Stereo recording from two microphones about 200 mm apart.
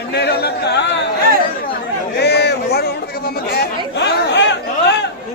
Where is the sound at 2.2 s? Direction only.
55° left (ahead or behind).